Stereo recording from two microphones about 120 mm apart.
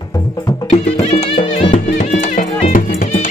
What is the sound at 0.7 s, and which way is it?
Music, 60° left (ahead or behind).